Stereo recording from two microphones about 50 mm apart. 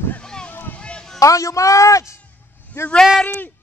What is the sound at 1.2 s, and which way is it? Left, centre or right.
Speech, left.